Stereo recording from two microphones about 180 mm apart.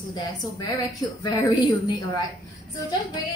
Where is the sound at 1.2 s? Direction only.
25° left (ahead or behind).